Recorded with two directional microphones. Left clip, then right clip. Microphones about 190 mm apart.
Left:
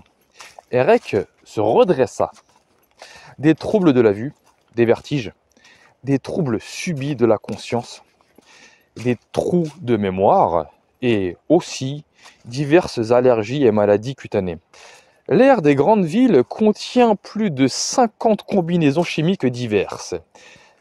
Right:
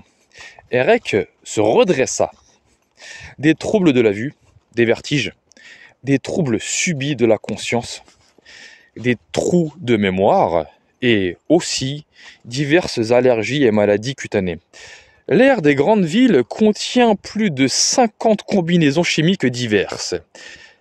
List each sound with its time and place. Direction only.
0.3 s speech: 25° right (ahead or behind); by 2.1 s 45° right (ahead or behind)
3.1 s speech: 25° right (ahead or behind)
8.5 s a sound: 25° right (ahead or behind)
9.0 s speech: 25° right (ahead or behind)